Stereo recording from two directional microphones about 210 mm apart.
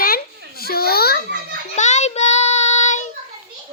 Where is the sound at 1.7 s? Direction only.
35° left (ahead or behind).